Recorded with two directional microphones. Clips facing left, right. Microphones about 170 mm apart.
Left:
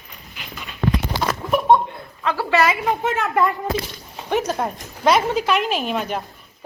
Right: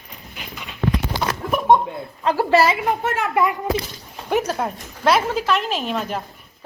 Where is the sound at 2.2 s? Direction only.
35° right (ahead or behind).